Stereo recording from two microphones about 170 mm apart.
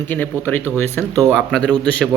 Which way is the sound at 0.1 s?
10° left (ahead or behind).